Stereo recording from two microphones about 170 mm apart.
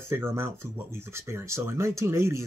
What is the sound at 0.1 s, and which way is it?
Speech, 15° right (ahead or behind).